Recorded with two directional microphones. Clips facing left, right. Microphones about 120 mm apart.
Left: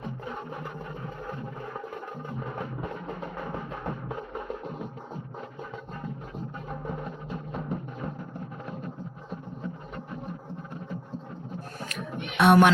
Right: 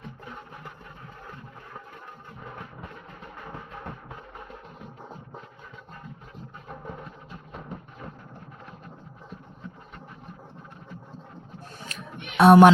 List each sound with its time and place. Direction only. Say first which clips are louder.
12.4 s speech: right 5 dB; 35° right (ahead or behind)